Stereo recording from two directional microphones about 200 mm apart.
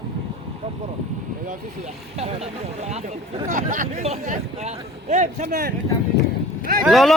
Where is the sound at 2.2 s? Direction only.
30° right (ahead or behind).